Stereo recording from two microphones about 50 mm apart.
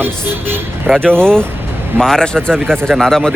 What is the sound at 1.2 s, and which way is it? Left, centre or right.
Speech, centre.